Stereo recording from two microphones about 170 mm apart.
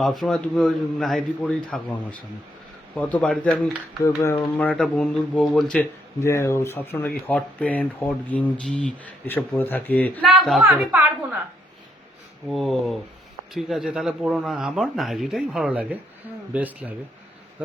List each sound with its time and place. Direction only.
0.0 s speech: centre (ahead or behind)
4.0 s speech: 20° left (ahead or behind)
6.2 s speech: 15° left (ahead or behind)
10.7 s speech: 10° right (ahead or behind)
12.5 s speech: centre (ahead or behind)